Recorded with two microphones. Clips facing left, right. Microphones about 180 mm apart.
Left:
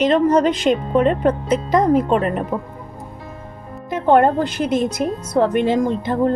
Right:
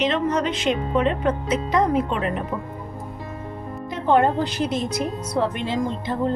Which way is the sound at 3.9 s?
50° left (ahead or behind).